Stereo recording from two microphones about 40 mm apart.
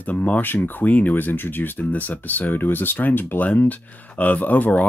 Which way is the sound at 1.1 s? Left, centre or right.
Left.